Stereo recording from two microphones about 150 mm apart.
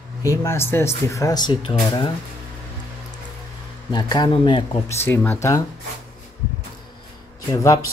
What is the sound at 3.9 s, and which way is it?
Speech, 30° left (ahead or behind).